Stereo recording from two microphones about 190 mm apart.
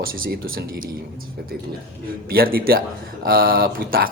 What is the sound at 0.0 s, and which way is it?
Speech, 50° right (ahead or behind).